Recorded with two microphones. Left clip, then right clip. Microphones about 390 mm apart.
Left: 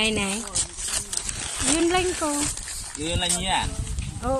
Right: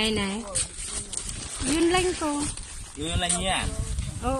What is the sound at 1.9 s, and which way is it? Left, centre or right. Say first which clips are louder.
Speech: left 1 dB; centre.